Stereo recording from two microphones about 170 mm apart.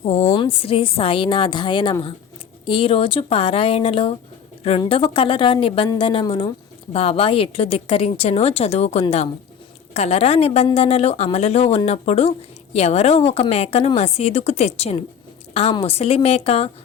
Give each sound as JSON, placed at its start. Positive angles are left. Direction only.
{"t": 0.0, "sound": "a woman's voice", "side_deg": 35}